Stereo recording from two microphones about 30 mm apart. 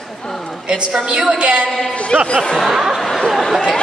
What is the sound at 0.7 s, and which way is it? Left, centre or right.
Speech, right.